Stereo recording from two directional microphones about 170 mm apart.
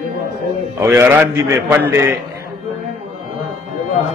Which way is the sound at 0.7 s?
15° right (ahead or behind).